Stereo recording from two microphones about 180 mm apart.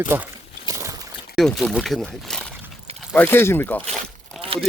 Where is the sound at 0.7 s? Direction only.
15° right (ahead or behind).